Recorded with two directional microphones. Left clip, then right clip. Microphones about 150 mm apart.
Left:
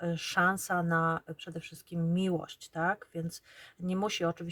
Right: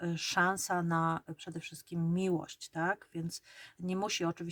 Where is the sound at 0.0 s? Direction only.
25° right (ahead or behind).